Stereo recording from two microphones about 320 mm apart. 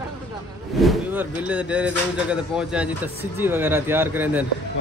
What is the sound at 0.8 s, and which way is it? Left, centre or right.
Speech, centre.